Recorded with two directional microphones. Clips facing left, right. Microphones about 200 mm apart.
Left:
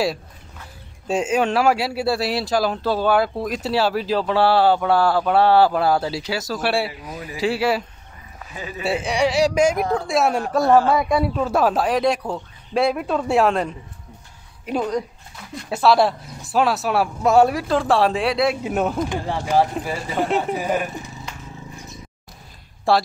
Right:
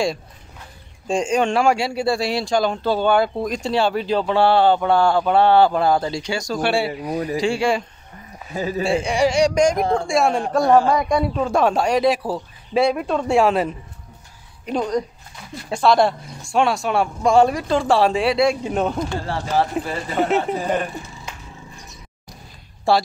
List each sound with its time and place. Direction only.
1.0 s speech: 5° left (ahead or behind)
8.5 s a man's voice: 40° right (ahead or behind)
8.8 s speech: 5° left (ahead or behind)
10.6 s a man's voice: 15° right (ahead or behind)
10.9 s speech: 5° left (ahead or behind)
14.7 s speech: 5° left (ahead or behind)
19.0 s speech: 15° left (ahead or behind)
22.9 s speech: centre (ahead or behind)